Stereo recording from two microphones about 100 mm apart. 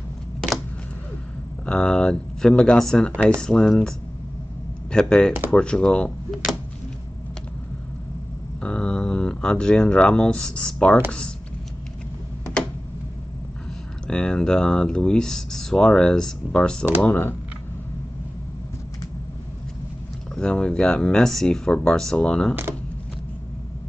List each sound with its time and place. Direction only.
1.7 s speech: 5° left (ahead or behind)
3.1 s speech: 15° right (ahead or behind)
3.3 s speech: 5° left (ahead or behind)
4.9 s speech: 5° left (ahead or behind)
8.5 s speech: 10° left (ahead or behind)
14.0 s speech: 5° left (ahead or behind)
17.1 s speech: 20° left (ahead or behind)
20.3 s speech: 10° left (ahead or behind)